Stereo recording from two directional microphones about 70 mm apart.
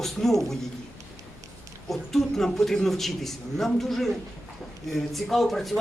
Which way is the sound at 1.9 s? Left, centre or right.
Centre.